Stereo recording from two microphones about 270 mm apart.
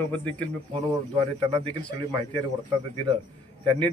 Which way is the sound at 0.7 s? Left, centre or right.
Right.